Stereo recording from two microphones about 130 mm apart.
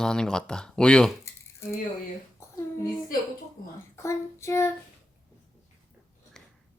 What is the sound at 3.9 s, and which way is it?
Child singing, 20° left (ahead or behind).